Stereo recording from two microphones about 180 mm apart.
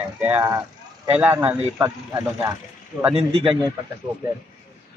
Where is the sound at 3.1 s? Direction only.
30° right (ahead or behind).